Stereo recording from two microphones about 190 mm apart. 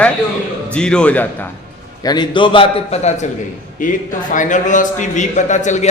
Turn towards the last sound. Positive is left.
turn(degrees=40)  # may be behind; listen again after turning